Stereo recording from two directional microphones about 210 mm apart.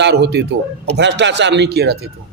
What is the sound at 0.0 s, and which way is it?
A man's voice, 55° right (ahead or behind).